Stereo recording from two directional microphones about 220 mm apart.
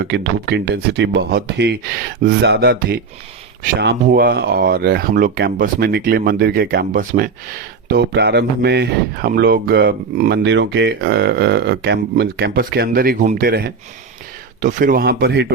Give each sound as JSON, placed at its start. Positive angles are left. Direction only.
{"t": 0.0, "sound": "speech", "side_deg": -50}
{"t": 7.9, "sound": "speech", "side_deg": -50}